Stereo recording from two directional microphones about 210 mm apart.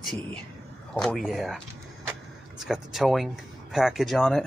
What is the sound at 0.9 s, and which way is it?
Speech, centre (ahead or behind).